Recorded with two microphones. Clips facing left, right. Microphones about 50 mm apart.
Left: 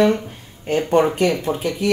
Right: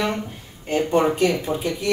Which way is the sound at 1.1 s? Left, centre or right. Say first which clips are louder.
Left 1 dB; left.